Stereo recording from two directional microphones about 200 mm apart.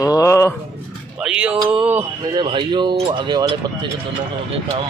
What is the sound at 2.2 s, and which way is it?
Speech, 25° right (ahead or behind).